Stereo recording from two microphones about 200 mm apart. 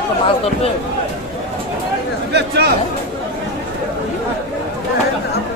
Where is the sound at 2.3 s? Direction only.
55° right (ahead or behind).